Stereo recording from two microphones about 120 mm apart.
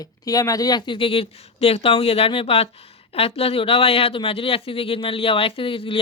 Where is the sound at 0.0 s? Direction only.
30° left (ahead or behind).